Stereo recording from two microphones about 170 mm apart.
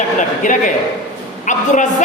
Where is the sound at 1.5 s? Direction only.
45° left (ahead or behind).